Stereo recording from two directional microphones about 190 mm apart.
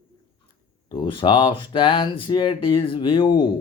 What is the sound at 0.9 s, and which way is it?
Speech, 25° left (ahead or behind).